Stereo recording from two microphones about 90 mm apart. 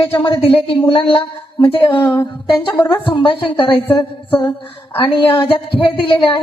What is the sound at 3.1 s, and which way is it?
Speech, 70° left (ahead or behind).